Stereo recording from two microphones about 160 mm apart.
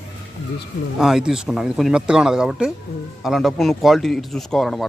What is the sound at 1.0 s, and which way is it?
A man's voice, 5° right (ahead or behind).